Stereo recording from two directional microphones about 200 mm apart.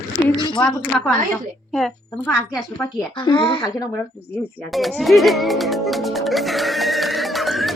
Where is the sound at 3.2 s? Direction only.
25° left (ahead or behind).